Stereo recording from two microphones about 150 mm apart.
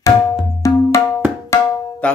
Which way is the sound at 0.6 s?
20° left (ahead or behind).